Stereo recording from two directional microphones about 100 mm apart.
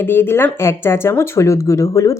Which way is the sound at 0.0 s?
20° left (ahead or behind).